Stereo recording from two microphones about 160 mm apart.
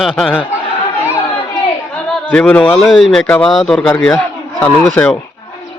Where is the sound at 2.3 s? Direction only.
5° left (ahead or behind).